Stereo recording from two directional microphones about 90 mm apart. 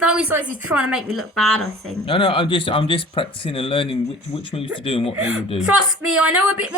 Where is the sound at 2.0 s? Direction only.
70° left (ahead or behind); by 5.1 s 90° left.